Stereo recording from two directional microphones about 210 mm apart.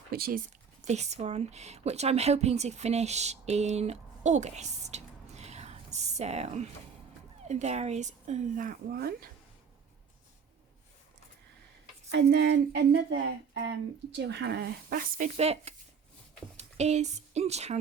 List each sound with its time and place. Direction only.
0.1 s speech: 45° right (ahead or behind)
12.1 s a woman's voice: 55° right (ahead or behind); by 17.7 s 30° right (ahead or behind)